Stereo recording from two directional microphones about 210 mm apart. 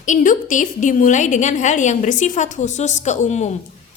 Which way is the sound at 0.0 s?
35° left (ahead or behind).